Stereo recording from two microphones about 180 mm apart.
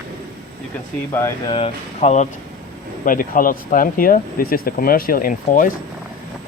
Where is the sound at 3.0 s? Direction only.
50° left (ahead or behind).